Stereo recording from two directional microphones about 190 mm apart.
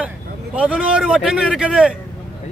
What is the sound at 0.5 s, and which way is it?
A man's voice, 5° right (ahead or behind).